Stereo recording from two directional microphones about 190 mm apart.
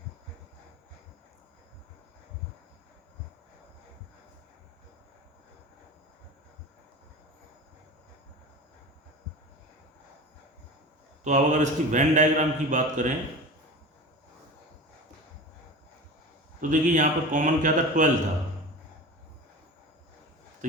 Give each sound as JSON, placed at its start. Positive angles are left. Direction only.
{"t": 11.2, "sound": "speech", "side_deg": -40}
{"t": 16.6, "sound": "a man's voice", "side_deg": -45}